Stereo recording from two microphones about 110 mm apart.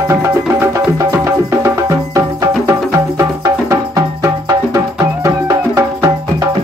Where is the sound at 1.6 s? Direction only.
30° right (ahead or behind).